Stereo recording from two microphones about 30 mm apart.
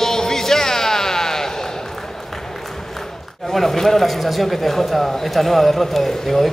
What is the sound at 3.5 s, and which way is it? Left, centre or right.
A man's voice, centre.